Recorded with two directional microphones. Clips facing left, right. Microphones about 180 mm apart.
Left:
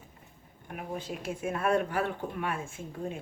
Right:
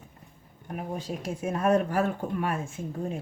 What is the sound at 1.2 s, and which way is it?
A woman's voice, 40° right (ahead or behind).